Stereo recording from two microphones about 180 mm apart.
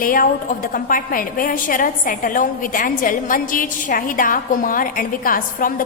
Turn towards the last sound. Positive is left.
turn(degrees=50)  # may be behind; listen again after turning